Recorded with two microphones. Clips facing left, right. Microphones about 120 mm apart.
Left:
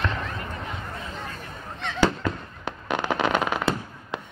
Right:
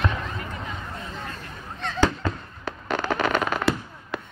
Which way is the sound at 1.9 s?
15° left (ahead or behind).